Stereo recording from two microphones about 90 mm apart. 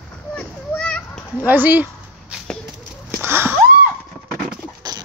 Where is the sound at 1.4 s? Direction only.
20° right (ahead or behind).